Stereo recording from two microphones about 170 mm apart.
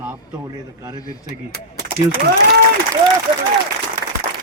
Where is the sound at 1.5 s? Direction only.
70° right (ahead or behind).